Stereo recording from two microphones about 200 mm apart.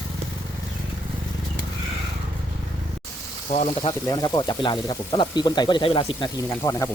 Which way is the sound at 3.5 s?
35° left (ahead or behind).